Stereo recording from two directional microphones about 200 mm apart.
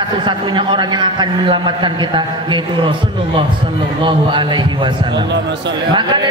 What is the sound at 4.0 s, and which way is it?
A man's voice, 25° right (ahead or behind).